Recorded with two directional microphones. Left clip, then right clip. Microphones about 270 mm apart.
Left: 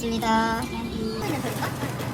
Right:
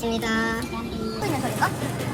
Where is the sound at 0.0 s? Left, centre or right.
Centre.